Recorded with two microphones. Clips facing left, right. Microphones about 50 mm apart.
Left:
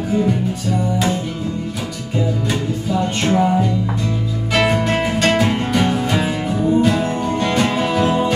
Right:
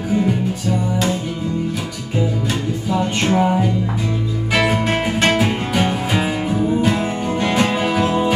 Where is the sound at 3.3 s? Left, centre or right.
Centre.